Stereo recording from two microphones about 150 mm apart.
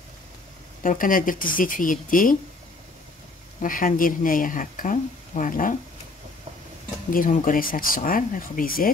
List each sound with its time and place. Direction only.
0.8 s speech: 65° left (ahead or behind)
3.6 s speech: 65° left (ahead or behind)
7.1 s speech: 65° left (ahead or behind)